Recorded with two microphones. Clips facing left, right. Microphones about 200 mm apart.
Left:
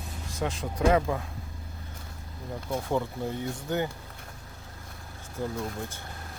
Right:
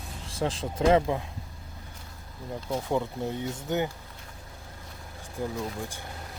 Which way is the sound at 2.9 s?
15° right (ahead or behind).